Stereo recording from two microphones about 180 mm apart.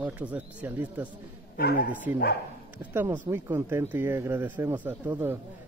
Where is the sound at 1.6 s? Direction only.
60° left (ahead or behind).